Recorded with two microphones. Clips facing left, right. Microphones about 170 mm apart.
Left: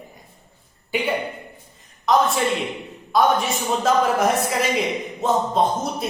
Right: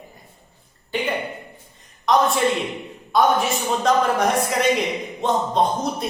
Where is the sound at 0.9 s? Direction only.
10° left (ahead or behind).